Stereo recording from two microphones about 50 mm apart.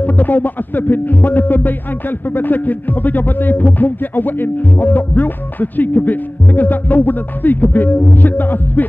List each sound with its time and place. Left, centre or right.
0.0 s speech: left